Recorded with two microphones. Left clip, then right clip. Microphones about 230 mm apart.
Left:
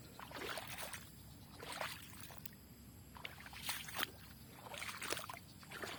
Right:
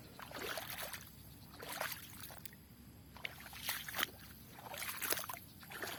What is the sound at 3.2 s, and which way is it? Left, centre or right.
Boat, right.